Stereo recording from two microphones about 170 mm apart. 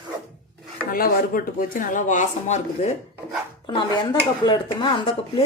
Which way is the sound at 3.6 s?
30° left (ahead or behind).